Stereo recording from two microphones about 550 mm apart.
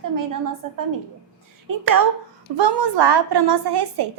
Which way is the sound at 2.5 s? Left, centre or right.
Right.